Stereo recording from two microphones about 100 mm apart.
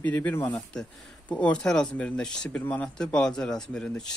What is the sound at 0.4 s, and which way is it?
Speech, 40° left (ahead or behind).